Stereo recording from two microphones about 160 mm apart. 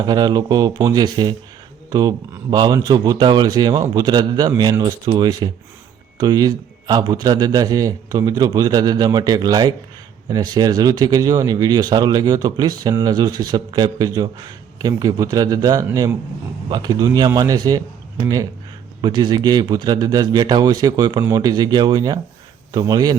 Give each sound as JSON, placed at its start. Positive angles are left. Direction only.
{"t": 0.0, "sound": "speech", "side_deg": -25}
{"t": 19.0, "sound": "speech", "side_deg": -25}